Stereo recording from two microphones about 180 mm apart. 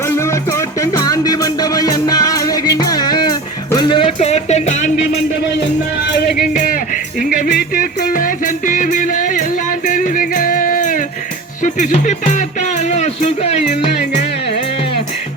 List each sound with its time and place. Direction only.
0.0 s music: 15° left (ahead or behind); by 5.2 s 40° left (ahead or behind)
6.1 s music: 60° left (ahead or behind); by 14.8 s 40° left (ahead or behind)